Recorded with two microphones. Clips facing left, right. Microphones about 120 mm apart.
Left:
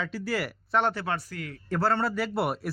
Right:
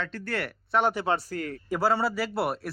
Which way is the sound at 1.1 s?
40° right (ahead or behind).